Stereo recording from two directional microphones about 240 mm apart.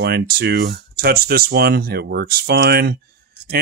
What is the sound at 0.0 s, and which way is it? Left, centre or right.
Speech, right.